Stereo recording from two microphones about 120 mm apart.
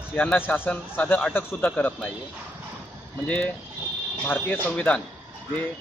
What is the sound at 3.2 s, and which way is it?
Speech, 10° left (ahead or behind).